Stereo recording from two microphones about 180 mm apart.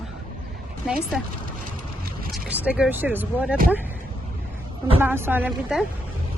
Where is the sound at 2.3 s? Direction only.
10° right (ahead or behind).